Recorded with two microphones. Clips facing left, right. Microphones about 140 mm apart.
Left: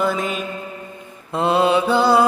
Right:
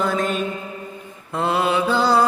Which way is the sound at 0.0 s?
5° left (ahead or behind).